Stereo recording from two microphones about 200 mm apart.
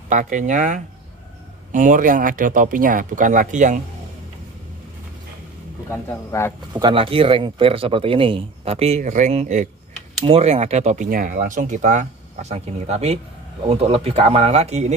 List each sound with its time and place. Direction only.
0.1 s speech: 40° right (ahead or behind)
5.9 s speech: 15° left (ahead or behind)
6.7 s speech: 25° right (ahead or behind)